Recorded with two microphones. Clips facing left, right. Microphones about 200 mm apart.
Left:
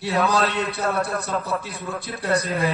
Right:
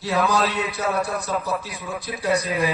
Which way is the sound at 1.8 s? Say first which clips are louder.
Left 1 dB; 60° left (ahead or behind).